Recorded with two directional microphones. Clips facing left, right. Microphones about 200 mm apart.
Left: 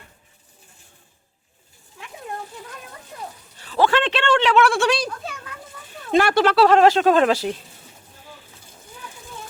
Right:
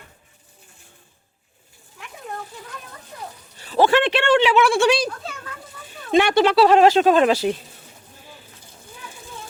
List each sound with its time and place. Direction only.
3.6 s speech: 20° right (ahead or behind); by 5.0 s centre (ahead or behind)
6.1 s speech: centre (ahead or behind)